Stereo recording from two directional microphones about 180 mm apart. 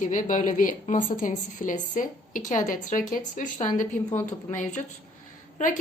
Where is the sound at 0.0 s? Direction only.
45° left (ahead or behind).